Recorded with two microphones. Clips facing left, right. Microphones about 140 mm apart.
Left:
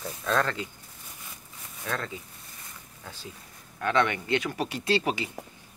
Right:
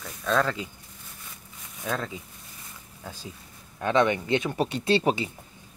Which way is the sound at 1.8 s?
10° right (ahead or behind).